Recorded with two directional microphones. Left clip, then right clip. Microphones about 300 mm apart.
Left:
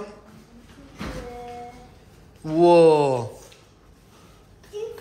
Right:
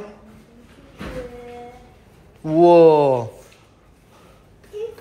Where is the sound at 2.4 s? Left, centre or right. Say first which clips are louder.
Right 3 dB; centre.